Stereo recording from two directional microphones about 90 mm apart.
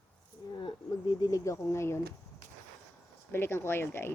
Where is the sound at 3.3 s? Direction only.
25° left (ahead or behind).